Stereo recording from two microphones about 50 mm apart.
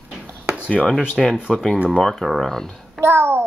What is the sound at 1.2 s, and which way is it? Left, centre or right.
Speech, centre.